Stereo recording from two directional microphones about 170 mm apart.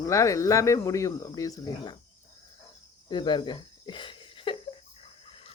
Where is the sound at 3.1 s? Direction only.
25° left (ahead or behind).